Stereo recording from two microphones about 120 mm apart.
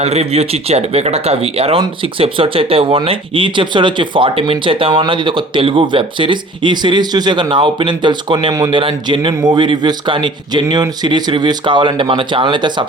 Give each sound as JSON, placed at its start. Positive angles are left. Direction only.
{"t": 0.0, "sound": "speech", "side_deg": -65}